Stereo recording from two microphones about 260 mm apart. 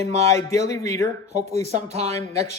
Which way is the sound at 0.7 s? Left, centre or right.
Centre.